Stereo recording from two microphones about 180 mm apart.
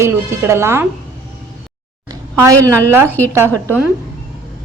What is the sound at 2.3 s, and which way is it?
A woman's voice, 15° right (ahead or behind).